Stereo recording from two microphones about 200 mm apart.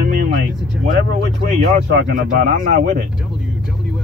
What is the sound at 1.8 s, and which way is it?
Speech, 55° right (ahead or behind).